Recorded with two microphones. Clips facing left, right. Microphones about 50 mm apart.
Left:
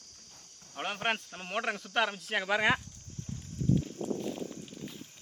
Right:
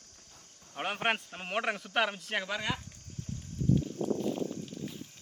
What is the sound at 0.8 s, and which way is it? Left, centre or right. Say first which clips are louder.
Speech: right 1 dB; centre.